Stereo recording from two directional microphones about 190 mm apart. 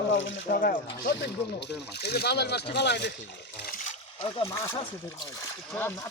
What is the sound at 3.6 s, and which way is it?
Splash, 45° left (ahead or behind).